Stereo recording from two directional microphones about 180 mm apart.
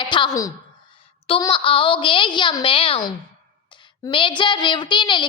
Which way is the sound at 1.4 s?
25° left (ahead or behind).